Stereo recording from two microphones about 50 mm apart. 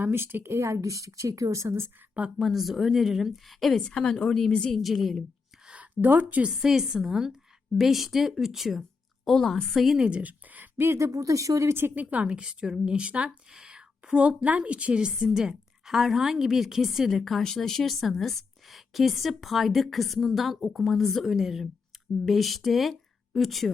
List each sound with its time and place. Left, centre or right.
0.0 s speech: right
0.4 s speech: right
2.4 s a woman's voice: centre
3.8 s a woman's voice: centre
4.7 s a woman's voice: centre
5.6 s a sound: right
6.1 s speech: right
6.6 s a woman's voice: centre
9.2 s a woman's voice: centre
10.0 s speech: right
10.9 s speech: right
11.9 s a woman's voice: right; by 21.2 s centre
21.2 s a woman's voice: centre